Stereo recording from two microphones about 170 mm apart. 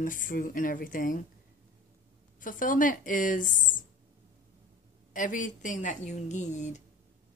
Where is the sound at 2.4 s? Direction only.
50° left (ahead or behind).